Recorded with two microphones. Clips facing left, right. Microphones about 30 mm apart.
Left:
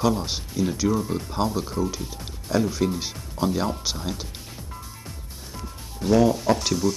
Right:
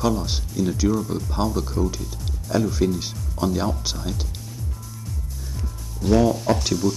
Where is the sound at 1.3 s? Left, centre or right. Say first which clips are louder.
Right 1 dB; centre.